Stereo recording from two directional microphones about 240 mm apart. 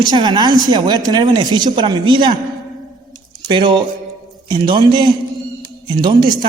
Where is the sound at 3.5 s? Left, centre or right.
Centre.